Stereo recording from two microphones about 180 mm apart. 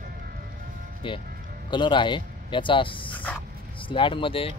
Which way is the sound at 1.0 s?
30° left (ahead or behind).